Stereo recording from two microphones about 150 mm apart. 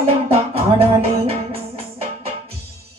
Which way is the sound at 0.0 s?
40° right (ahead or behind).